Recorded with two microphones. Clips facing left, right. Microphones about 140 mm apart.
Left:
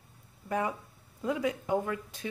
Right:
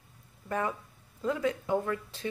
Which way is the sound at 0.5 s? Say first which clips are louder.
Even; 10° left (ahead or behind).